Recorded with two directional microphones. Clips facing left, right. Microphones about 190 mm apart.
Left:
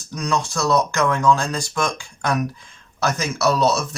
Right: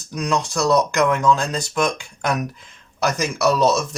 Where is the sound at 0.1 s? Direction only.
15° right (ahead or behind).